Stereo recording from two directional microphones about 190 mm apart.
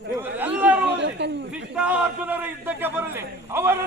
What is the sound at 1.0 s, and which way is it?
Chatter, 65° right (ahead or behind).